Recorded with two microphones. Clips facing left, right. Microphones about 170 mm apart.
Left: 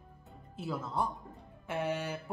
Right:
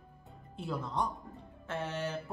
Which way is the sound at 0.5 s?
5° left (ahead or behind).